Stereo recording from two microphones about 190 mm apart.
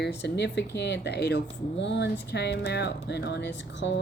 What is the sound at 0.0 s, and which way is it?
Speech, 60° left (ahead or behind).